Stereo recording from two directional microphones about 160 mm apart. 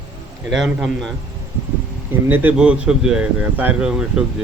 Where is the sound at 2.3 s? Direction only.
10° right (ahead or behind).